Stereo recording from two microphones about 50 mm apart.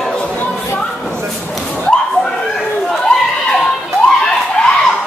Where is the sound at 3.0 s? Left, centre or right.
Centre.